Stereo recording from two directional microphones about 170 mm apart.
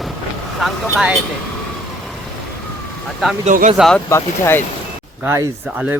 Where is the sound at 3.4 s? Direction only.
45° right (ahead or behind).